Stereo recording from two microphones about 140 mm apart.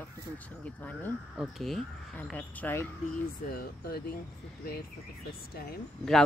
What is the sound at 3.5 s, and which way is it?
Speech, 90° left.